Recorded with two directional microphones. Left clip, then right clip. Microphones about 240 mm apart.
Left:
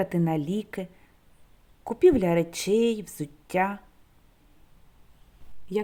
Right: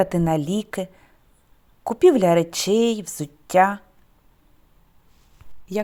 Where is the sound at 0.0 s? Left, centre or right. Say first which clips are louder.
Right 7 dB; centre.